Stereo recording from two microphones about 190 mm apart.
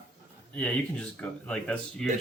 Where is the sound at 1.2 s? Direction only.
5° left (ahead or behind).